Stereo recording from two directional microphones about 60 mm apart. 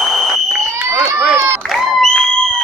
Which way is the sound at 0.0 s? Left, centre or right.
Centre.